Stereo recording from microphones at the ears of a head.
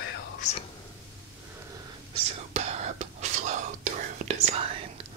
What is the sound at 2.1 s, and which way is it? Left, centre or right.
Whispering, right.